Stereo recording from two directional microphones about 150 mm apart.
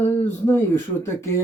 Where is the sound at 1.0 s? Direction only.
15° left (ahead or behind).